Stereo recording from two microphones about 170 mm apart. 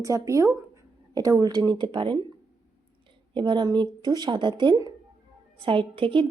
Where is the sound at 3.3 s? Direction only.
30° right (ahead or behind).